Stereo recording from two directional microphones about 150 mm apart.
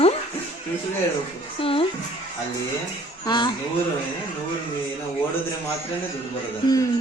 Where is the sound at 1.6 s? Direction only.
40° left (ahead or behind).